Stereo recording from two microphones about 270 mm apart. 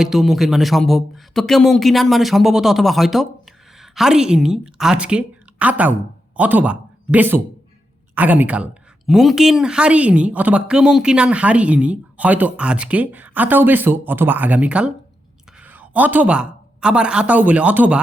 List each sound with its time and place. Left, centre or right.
0.0 s a man's voice: centre